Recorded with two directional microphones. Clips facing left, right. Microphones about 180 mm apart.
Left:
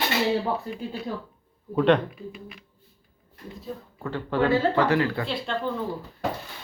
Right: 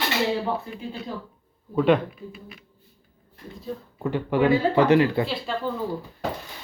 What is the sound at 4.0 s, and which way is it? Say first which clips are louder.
Speech: right 3 dB; 15° right (ahead or behind).